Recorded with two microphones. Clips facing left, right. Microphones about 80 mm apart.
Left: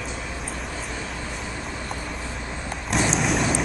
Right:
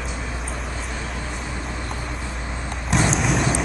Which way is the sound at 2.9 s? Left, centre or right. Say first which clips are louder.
Right 2 dB; centre.